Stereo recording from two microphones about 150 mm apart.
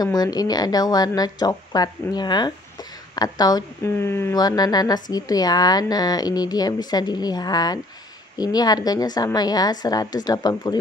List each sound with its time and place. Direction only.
0.0 s speech: 25° left (ahead or behind)